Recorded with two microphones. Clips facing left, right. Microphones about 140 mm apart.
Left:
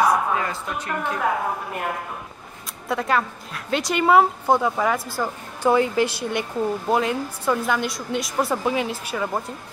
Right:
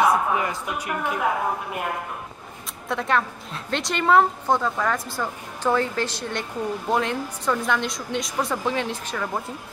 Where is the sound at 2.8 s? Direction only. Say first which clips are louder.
Left 1 dB; centre (ahead or behind).